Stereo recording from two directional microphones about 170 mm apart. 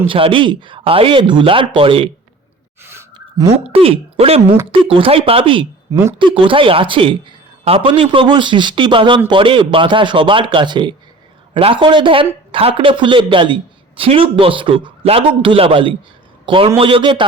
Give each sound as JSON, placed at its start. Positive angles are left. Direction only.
{"t": 0.1, "sound": "a man's voice", "side_deg": -30}
{"t": 2.8, "sound": "gasp", "side_deg": -15}
{"t": 3.2, "sound": "a sound", "side_deg": -20}
{"t": 3.5, "sound": "a man's voice", "side_deg": -35}
{"t": 5.9, "sound": "speech", "side_deg": -15}
{"t": 6.1, "sound": "a man's voice", "side_deg": -30}